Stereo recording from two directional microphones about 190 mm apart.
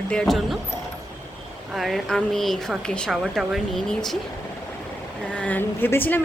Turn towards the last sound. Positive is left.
turn(degrees=10)  # may be behind; listen again after turning